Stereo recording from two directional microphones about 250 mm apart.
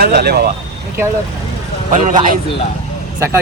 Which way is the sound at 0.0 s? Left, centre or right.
Right.